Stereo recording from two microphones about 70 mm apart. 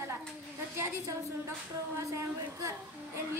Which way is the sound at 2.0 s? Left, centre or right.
Right.